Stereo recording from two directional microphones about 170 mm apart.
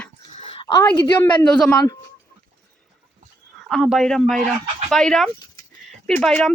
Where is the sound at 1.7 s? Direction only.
20° left (ahead or behind).